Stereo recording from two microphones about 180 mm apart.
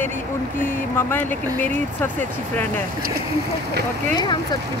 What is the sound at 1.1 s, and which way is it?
Speech, 10° left (ahead or behind).